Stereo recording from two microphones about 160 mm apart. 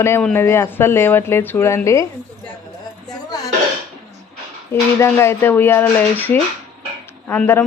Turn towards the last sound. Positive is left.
turn(degrees=15)  # may be behind; listen again after turning